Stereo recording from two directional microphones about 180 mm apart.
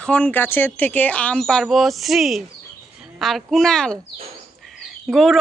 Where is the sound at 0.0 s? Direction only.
5° left (ahead or behind).